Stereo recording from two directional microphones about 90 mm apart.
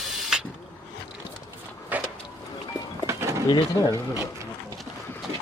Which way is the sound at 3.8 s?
45° left (ahead or behind).